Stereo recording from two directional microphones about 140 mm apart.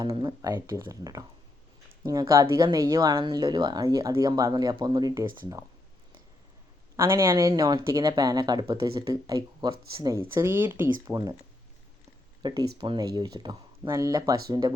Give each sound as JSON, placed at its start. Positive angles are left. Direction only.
{"t": 0.0, "sound": "speech", "side_deg": -30}
{"t": 6.9, "sound": "speech", "side_deg": -20}
{"t": 11.0, "sound": "speech", "side_deg": -25}
{"t": 12.4, "sound": "speech", "side_deg": -30}